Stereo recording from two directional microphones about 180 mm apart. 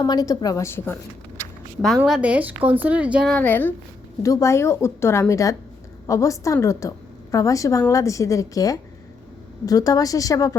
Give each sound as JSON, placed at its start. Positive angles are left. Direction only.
{"t": 0.0, "sound": "a woman's voice", "side_deg": 20}
{"t": 2.0, "sound": "a woman's voice", "side_deg": -5}
{"t": 3.3, "sound": "a woman's voice", "side_deg": 10}